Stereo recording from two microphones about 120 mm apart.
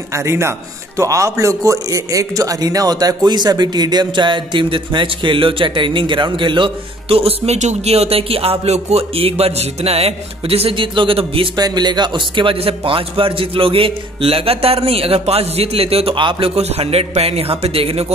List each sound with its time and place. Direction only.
0.1 s a man's voice: 25° right (ahead or behind); by 11.4 s 50° right (ahead or behind)
11.5 s a man's voice: 35° right (ahead or behind); by 18.0 s 55° right (ahead or behind)